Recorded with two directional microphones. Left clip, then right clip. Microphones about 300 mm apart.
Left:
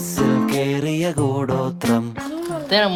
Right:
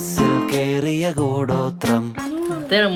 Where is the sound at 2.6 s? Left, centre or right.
Left.